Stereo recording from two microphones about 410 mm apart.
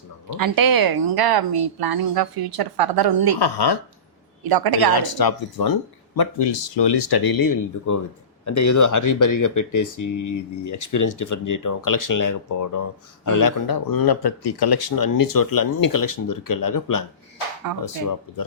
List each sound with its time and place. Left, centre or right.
0.3 s a woman's voice: right
3.3 s speech: left
4.4 s a woman's voice: right
4.9 s speech: left
6.1 s speech: left